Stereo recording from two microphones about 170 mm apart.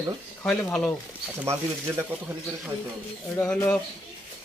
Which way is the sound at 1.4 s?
15° right (ahead or behind).